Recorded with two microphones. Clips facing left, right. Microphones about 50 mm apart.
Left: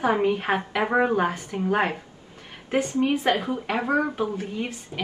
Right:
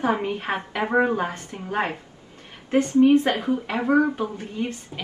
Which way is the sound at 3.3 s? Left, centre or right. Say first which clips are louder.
Even; left.